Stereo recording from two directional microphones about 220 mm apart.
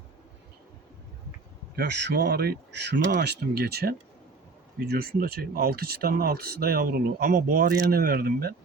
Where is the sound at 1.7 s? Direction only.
50° right (ahead or behind).